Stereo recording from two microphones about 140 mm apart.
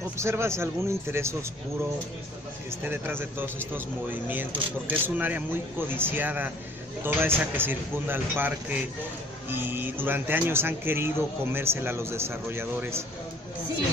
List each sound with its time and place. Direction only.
0.2 s a man's voice: 20° right (ahead or behind)
2.8 s speech: 15° right (ahead or behind)